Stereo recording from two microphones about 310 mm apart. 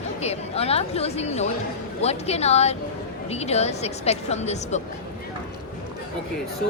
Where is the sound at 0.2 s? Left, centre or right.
Centre.